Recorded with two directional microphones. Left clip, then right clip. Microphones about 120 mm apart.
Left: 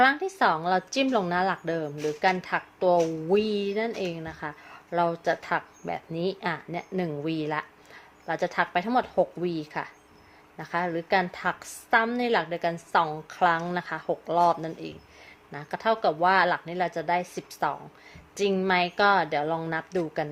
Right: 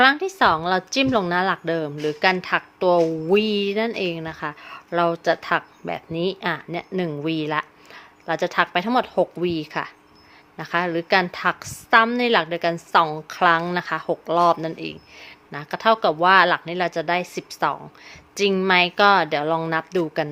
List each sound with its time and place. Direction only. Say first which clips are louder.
0.0 s a woman's voice: right 5 dB; 40° right (ahead or behind)